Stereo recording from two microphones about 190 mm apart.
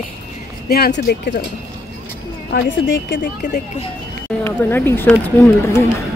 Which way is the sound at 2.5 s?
60° left (ahead or behind).